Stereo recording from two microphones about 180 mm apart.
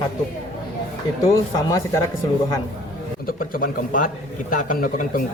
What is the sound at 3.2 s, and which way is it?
Speech, 50° left (ahead or behind).